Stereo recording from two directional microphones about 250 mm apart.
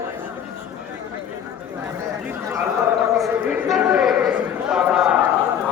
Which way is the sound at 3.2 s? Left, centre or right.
Centre.